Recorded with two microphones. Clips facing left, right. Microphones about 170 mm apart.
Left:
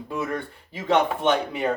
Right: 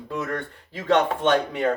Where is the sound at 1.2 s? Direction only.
10° left (ahead or behind).